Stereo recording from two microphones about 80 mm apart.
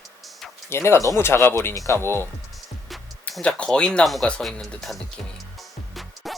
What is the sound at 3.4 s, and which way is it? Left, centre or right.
Speech, centre.